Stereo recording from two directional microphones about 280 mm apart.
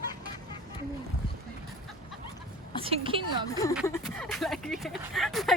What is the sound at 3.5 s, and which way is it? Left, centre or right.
Speech, centre.